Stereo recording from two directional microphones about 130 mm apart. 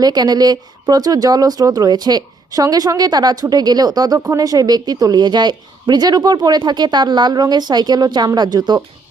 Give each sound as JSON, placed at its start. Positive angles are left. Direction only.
{"t": 0.0, "sound": "a woman's voice", "side_deg": -30}